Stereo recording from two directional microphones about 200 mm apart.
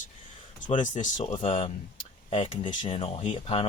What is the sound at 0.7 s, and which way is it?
Speech, 40° left (ahead or behind).